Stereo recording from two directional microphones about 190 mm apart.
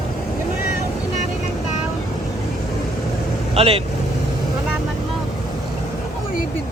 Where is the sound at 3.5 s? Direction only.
30° right (ahead or behind).